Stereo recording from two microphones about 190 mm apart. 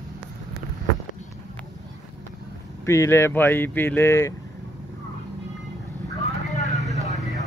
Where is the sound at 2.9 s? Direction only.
15° left (ahead or behind).